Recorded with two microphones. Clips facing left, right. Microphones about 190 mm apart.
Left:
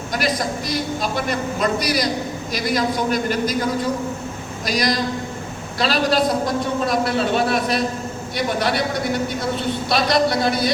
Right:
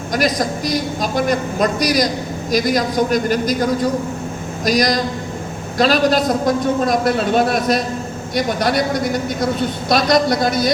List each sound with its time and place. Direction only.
0.1 s a woman's voice: 40° right (ahead or behind)